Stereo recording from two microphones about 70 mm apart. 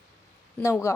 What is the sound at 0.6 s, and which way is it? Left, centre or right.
Speech, left.